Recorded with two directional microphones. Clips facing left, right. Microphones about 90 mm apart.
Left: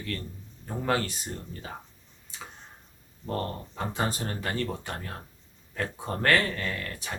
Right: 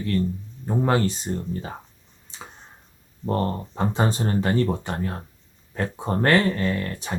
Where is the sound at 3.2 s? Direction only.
30° right (ahead or behind).